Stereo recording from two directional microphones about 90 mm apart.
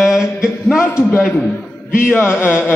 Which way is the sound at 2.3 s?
15° right (ahead or behind).